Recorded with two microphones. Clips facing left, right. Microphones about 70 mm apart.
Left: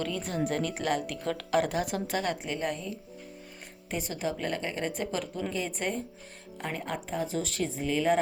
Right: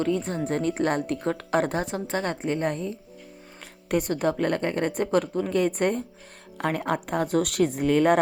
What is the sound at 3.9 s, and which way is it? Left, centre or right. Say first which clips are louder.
A woman's voice: right 8 dB; right.